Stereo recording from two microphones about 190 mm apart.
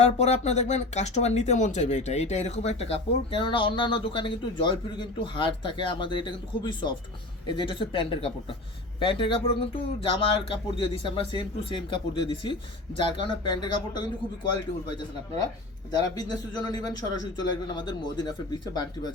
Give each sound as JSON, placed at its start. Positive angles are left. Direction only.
{"t": 0.0, "sound": "speech", "side_deg": 35}
{"t": 15.9, "sound": "speech", "side_deg": 20}